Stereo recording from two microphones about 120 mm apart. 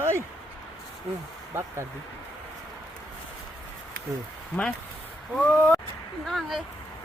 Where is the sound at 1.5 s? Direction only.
20° right (ahead or behind).